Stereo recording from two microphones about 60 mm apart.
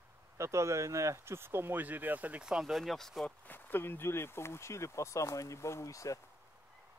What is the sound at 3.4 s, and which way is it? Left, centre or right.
Speech, left.